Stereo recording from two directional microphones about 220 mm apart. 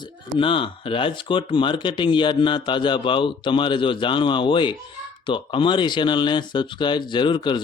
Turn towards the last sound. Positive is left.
turn(degrees=20)  # may be behind; listen again after turning